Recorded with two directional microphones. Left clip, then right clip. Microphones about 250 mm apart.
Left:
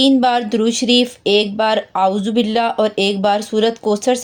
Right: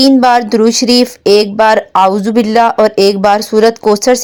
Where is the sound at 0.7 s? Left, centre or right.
Centre.